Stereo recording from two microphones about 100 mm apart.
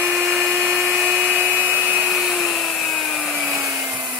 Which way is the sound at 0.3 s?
15° right (ahead or behind).